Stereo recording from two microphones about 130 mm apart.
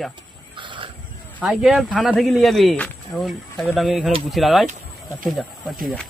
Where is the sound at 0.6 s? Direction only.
40° right (ahead or behind).